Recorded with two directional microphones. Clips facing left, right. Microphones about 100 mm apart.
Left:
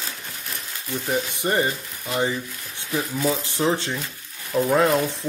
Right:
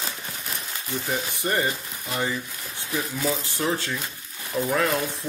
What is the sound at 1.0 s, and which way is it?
Frying, 20° left (ahead or behind).